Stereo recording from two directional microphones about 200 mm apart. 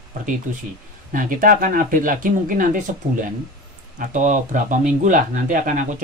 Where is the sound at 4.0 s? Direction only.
40° right (ahead or behind).